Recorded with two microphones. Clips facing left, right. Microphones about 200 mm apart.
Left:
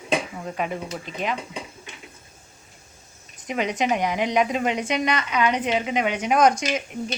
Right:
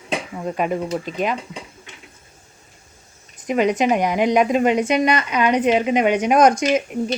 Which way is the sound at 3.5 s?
45° right (ahead or behind).